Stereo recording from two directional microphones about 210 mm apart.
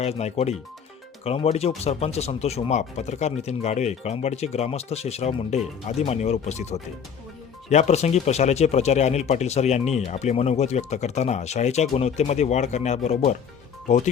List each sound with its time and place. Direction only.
0.0 s speech: 30° left (ahead or behind)